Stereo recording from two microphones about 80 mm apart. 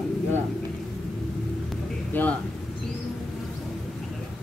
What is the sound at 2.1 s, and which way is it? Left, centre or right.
Speech, left.